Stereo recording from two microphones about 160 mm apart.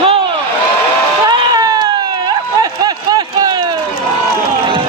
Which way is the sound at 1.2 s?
25° right (ahead or behind).